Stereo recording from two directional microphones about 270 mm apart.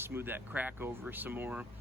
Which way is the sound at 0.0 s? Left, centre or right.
Centre.